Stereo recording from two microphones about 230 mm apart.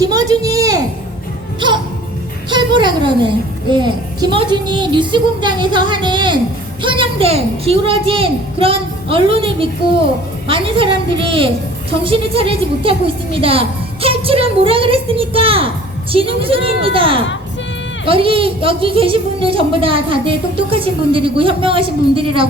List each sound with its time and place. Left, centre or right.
0.0 s a sound: centre
2.5 s music: centre
3.7 s a woman's voice: centre